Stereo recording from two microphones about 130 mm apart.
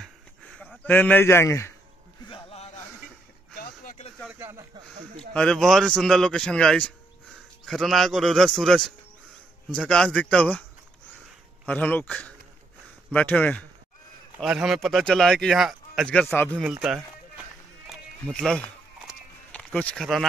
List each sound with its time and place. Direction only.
0.0 s a sound: 5° left (ahead or behind)
0.8 s speech: 15° left (ahead or behind)
2.2 s a sound: 45° left (ahead or behind)
4.3 s speech: 20° right (ahead or behind)
4.7 s speech: 40° right (ahead or behind)
5.3 s a man's voice: 5° left (ahead or behind)
11.6 s a man's voice: 10° left (ahead or behind)
14.4 s a man's voice: 5° right (ahead or behind)
17.8 s a sound: 5° left (ahead or behind)
20.0 s a man's voice: centre (ahead or behind)